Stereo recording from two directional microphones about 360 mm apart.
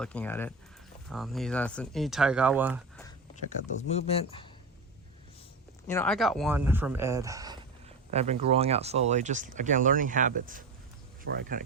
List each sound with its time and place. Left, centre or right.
0.0 s speech: centre
3.9 s speech: centre
5.9 s speech: centre; by 11.6 s right